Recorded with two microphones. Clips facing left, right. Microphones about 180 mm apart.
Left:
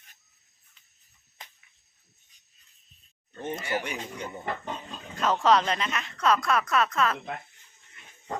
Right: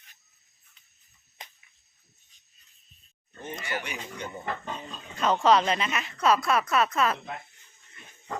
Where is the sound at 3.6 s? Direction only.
30° left (ahead or behind).